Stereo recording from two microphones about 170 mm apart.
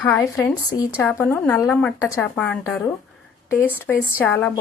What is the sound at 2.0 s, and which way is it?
Speech, 20° left (ahead or behind).